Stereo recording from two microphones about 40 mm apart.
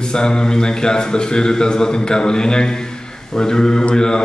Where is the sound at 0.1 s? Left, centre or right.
Centre.